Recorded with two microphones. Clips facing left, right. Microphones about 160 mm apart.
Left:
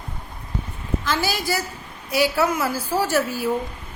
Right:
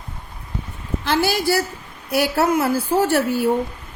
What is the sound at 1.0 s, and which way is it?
A woman's voice, 65° right (ahead or behind).